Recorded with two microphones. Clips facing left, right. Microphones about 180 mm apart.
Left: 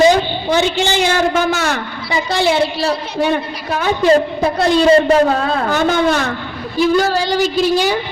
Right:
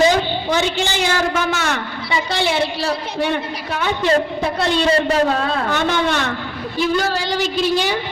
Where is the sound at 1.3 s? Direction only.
35° left (ahead or behind).